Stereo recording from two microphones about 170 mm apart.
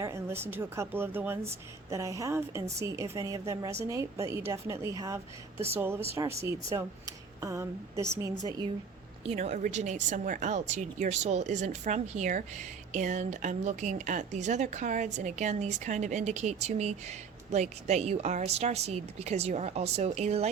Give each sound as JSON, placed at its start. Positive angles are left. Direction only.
{"t": 0.0, "sound": "a woman's voice", "side_deg": -15}
{"t": 9.2, "sound": "a woman's voice", "side_deg": -40}